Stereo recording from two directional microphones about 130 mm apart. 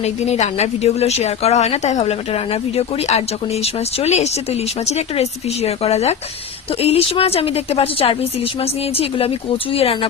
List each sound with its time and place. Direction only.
0.0 s a woman's voice: 55° left (ahead or behind)